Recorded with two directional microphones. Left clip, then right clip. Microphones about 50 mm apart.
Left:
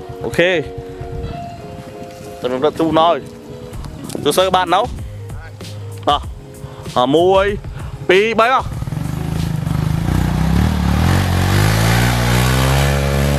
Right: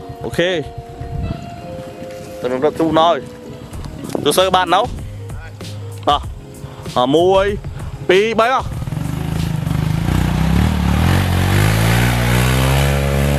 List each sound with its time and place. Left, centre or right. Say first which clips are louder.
0.2 s speech: left 3 dB; left
2.9 s speech: even; centre
4.1 s music: right 1 dB; left
4.4 s speech: even; left
6.1 s speech: even; left
8.7 s vehicle: even; centre